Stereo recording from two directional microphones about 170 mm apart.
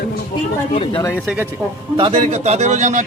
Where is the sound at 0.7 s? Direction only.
40° left (ahead or behind).